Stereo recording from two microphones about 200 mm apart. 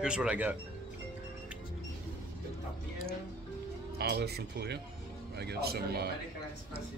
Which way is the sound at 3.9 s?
55° right (ahead or behind).